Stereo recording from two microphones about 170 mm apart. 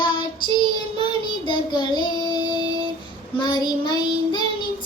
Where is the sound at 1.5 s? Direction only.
25° left (ahead or behind).